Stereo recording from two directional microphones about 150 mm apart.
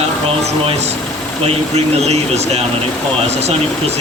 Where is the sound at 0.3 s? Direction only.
45° right (ahead or behind).